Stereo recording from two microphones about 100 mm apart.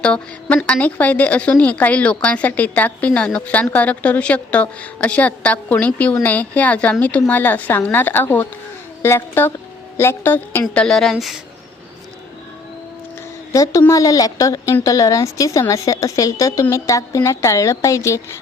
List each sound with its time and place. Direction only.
0.0 s a woman's voice: 10° left (ahead or behind)
10.8 s a woman's voice: 5° left (ahead or behind)
13.5 s a woman's voice: 30° left (ahead or behind)